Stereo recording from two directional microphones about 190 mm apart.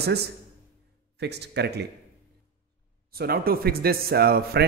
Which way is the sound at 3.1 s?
50° right (ahead or behind).